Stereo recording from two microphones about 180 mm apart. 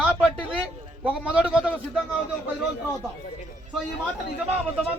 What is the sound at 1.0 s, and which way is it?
Speech, 5° right (ahead or behind).